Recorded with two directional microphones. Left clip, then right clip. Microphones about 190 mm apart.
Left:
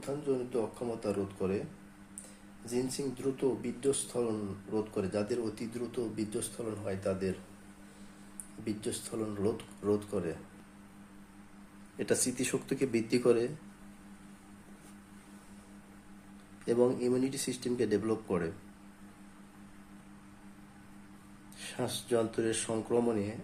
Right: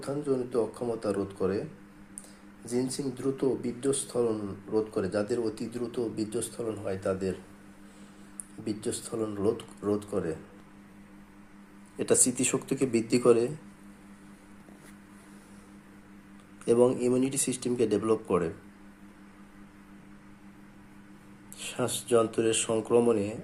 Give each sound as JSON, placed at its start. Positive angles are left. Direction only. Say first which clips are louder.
{"t": 0.0, "sound": "speech", "louder": "right 4 dB", "side_deg": -15}
{"t": 2.6, "sound": "speech", "louder": "right 3 dB", "side_deg": -15}
{"t": 8.6, "sound": "speech", "louder": "right 4 dB", "side_deg": -15}
{"t": 11.9, "sound": "speech", "louder": "right 6 dB", "side_deg": -10}
{"t": 16.6, "sound": "speech", "louder": "right 5 dB", "side_deg": -10}
{"t": 21.6, "sound": "speech", "louder": "right 5 dB", "side_deg": -10}